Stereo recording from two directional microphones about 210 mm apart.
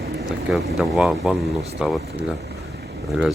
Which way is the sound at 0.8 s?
5° right (ahead or behind).